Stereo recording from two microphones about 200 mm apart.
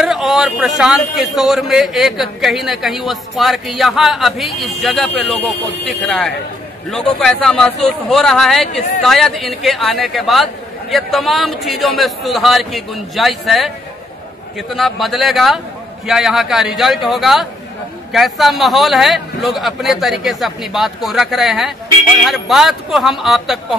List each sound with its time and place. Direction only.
0.0 s a man's voice: centre (ahead or behind)
14.7 s a man's voice: centre (ahead or behind)